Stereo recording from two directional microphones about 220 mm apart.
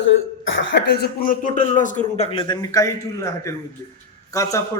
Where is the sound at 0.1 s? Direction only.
60° left (ahead or behind); by 2.9 s 15° left (ahead or behind).